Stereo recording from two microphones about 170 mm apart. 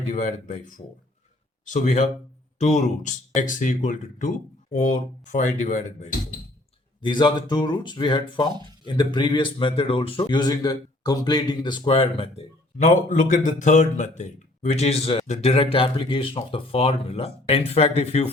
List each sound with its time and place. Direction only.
0.1 s speech: 45° left (ahead or behind)
7.0 s speech: 25° left (ahead or behind)